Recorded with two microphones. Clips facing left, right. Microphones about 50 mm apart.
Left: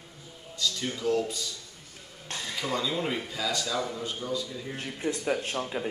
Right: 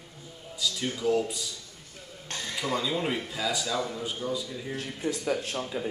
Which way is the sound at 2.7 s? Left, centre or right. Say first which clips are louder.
Right 1 dB; centre.